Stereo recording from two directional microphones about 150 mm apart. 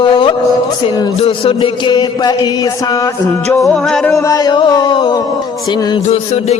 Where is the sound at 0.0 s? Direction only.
30° left (ahead or behind).